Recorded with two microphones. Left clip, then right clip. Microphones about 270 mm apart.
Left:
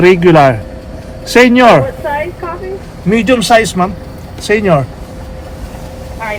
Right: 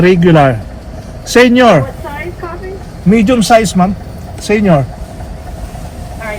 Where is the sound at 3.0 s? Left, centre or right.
Left.